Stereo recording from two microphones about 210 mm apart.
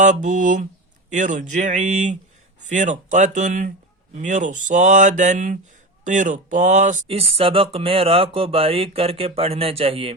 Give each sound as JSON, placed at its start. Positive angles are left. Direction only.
{"t": 0.0, "sound": "speech", "side_deg": -35}